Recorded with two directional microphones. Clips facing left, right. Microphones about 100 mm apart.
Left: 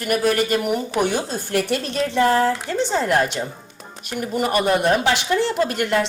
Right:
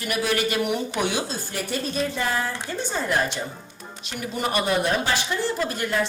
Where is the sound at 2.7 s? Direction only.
75° left (ahead or behind).